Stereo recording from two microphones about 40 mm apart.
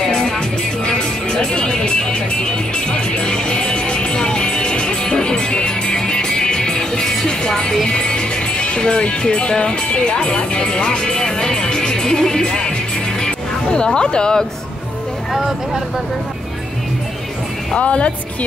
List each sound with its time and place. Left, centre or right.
0.8 s music: centre
7.9 s speech: left
15.3 s speech: centre
17.7 s speech: left